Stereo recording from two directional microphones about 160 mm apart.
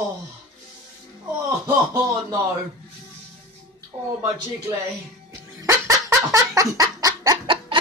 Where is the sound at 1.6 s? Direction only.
20° right (ahead or behind).